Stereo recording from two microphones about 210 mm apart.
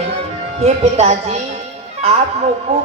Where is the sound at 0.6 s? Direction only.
35° right (ahead or behind).